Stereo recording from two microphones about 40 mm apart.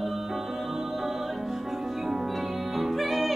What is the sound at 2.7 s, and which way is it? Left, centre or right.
Music, centre.